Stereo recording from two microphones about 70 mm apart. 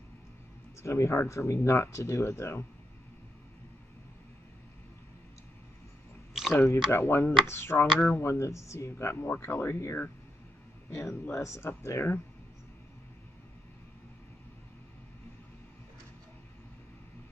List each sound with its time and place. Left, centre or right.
0.8 s speech: left
6.3 s a sound: centre
6.6 s speech: left